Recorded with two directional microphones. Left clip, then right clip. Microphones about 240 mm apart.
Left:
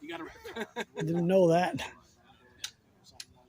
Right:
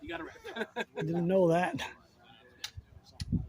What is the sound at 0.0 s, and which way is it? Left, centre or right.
Speech, centre.